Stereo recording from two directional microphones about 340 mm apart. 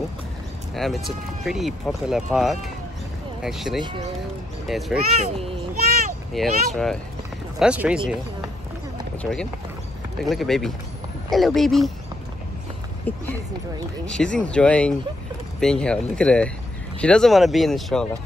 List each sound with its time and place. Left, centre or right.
0.7 s speech: centre
5.1 s a child's voice: centre
6.3 s speech: centre
9.2 s speech: centre
13.1 s speech: centre